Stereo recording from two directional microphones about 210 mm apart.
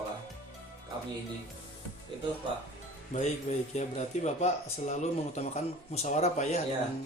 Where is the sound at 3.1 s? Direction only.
35° left (ahead or behind).